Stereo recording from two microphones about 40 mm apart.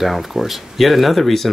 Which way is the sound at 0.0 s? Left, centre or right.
Centre.